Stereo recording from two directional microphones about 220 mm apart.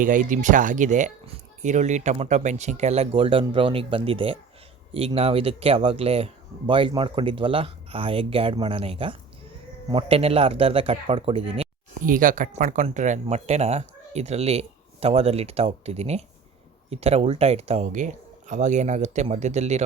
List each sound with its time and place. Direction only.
0.0 s speech: 35° right (ahead or behind)
12.0 s speech: 40° right (ahead or behind)